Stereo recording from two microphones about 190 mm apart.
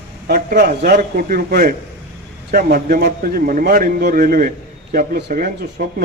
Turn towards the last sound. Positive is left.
turn(degrees=-50)  # may be behind; listen again after turning